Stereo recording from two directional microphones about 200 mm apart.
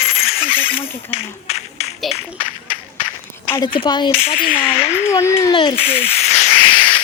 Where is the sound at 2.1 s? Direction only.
30° left (ahead or behind).